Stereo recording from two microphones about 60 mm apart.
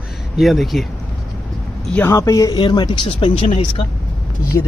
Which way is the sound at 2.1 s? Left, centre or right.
Left.